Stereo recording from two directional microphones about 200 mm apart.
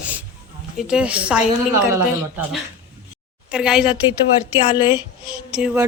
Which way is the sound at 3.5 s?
5° right (ahead or behind).